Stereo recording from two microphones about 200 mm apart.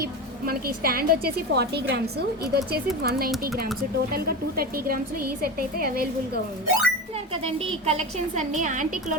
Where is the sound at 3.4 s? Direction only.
50° right (ahead or behind).